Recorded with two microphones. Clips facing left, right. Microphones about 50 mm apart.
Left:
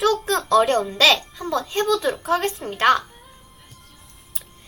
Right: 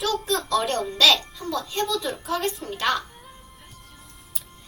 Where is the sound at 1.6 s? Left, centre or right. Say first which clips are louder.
Left 7 dB; left.